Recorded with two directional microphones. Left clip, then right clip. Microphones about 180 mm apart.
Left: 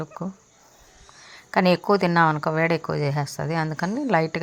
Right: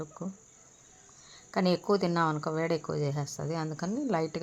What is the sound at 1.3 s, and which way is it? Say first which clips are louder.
Speech: left 9 dB; 20° left (ahead or behind).